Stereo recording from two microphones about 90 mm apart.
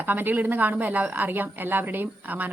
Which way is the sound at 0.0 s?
20° right (ahead or behind).